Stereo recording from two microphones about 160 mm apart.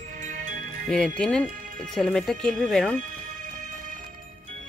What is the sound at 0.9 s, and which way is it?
Speech, 5° left (ahead or behind).